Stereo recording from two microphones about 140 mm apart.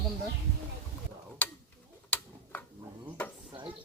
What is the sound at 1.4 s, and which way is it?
Tick-tock, 10° left (ahead or behind).